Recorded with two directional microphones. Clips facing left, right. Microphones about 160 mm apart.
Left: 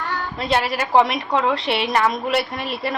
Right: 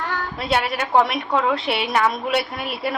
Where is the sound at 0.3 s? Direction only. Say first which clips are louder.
Left 1 dB; centre (ahead or behind).